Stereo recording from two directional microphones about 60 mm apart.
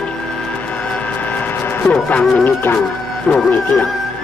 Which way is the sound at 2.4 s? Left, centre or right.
Left.